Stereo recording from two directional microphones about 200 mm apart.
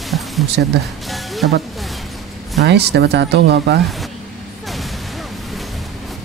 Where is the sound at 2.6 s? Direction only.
55° right (ahead or behind).